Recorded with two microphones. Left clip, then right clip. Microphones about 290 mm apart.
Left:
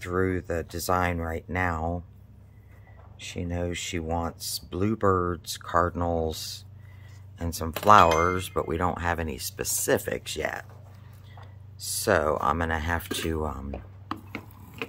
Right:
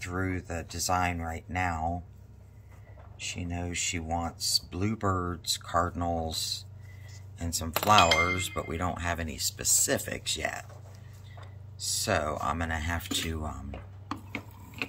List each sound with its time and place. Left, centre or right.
0.0 s speech: centre
3.2 s speech: centre
11.8 s speech: centre